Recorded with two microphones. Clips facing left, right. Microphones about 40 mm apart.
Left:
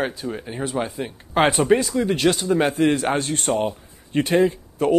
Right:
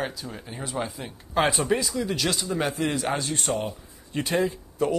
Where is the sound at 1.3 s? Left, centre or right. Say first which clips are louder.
Left 6 dB; left.